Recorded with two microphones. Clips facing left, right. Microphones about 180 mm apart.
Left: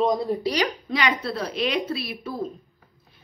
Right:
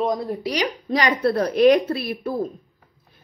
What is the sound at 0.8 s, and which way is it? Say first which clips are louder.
Speech: right 3 dB; 40° right (ahead or behind).